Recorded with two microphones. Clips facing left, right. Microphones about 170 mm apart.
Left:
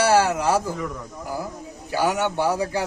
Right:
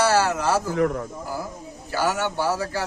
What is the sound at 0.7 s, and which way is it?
Speech, 65° right (ahead or behind).